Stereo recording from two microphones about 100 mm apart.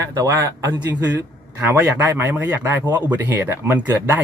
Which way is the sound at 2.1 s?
20° right (ahead or behind).